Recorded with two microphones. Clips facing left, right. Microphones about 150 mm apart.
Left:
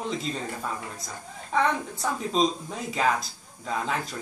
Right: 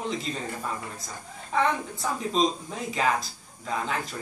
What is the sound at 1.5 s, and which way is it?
Speech, centre (ahead or behind).